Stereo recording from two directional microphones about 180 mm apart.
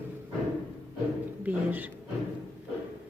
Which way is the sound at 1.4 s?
10° right (ahead or behind).